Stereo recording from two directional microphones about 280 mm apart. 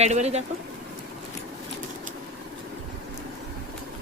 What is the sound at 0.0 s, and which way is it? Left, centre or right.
Speech, right.